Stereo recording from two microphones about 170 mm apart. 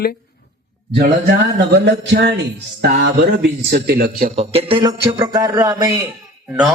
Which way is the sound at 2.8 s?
80° right.